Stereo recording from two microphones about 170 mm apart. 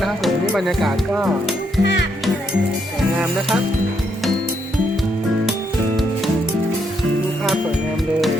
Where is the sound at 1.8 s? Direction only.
90° left.